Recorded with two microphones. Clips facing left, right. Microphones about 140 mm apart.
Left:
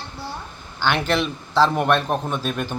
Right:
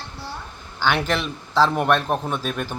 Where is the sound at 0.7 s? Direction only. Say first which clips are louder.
Left 1 dB; 5° right (ahead or behind).